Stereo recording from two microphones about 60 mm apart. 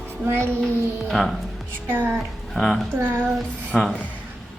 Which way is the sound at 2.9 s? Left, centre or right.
Right.